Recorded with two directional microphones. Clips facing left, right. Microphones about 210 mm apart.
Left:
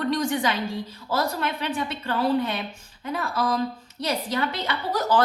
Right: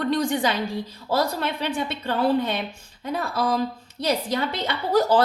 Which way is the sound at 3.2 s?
35° right (ahead or behind).